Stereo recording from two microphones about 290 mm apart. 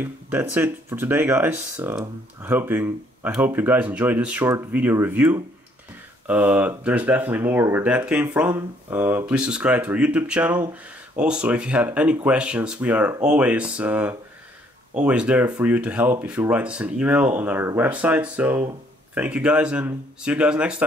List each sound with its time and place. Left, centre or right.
0.0 s speech: centre